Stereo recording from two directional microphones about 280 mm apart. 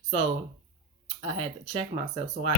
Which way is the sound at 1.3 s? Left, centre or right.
Centre.